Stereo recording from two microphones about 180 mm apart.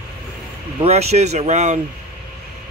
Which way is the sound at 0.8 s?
35° right (ahead or behind).